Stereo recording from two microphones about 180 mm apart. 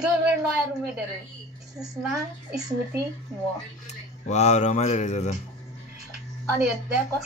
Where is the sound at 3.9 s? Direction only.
40° left (ahead or behind).